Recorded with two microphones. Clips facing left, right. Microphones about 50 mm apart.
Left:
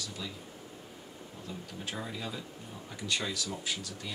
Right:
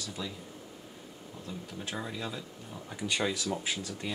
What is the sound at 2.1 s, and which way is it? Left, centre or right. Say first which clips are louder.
Speech: right 1 dB; centre.